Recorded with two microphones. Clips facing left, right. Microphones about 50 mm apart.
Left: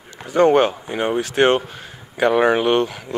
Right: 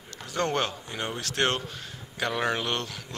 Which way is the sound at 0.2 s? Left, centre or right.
Left.